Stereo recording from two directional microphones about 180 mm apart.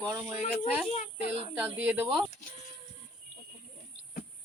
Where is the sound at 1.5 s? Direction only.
10° right (ahead or behind).